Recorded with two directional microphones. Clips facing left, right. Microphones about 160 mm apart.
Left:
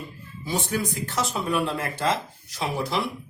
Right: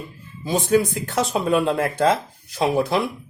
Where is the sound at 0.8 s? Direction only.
55° right (ahead or behind).